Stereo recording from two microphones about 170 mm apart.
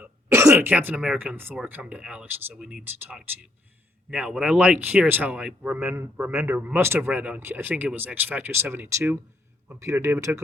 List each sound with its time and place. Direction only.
0.0 s speech: 15° right (ahead or behind)